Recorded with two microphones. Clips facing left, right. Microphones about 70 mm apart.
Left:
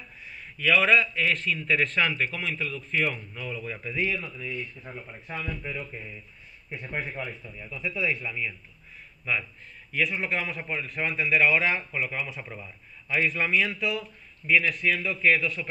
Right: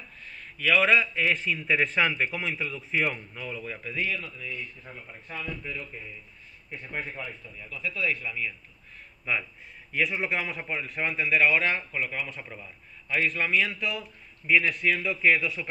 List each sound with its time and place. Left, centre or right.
0.2 s a man's voice: centre
6.7 s a man's voice: centre
7.4 s speech: centre
9.2 s a man's voice: centre